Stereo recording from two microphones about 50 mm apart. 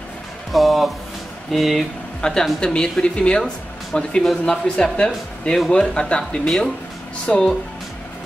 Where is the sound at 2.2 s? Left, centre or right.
Centre.